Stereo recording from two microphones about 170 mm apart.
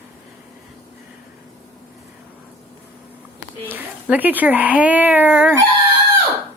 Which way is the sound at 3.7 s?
10° right (ahead or behind).